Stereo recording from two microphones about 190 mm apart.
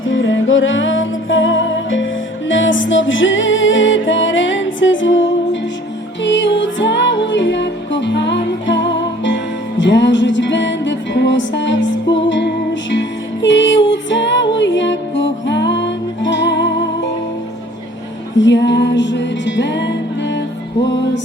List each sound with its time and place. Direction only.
0.0 s music: 85° left
6.2 s music: 70° left (ahead or behind)
18.3 s music: 70° left (ahead or behind)